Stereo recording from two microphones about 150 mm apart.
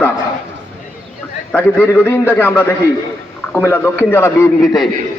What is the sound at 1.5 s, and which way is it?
A man's voice, 10° left (ahead or behind).